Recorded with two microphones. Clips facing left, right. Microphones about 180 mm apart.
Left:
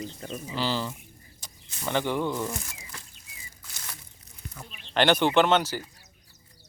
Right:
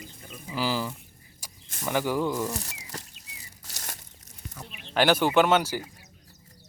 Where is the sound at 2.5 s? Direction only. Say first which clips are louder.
Right 2 dB; 40° right (ahead or behind).